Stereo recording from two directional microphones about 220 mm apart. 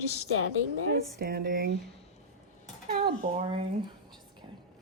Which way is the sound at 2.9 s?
40° right (ahead or behind).